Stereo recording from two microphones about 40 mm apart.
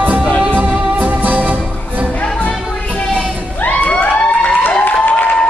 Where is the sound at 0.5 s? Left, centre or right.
Right.